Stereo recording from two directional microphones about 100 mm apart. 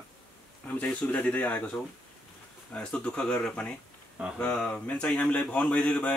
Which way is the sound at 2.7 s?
10° left (ahead or behind).